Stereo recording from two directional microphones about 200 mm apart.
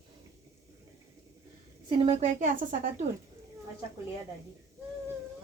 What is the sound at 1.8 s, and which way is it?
Speech, 25° right (ahead or behind).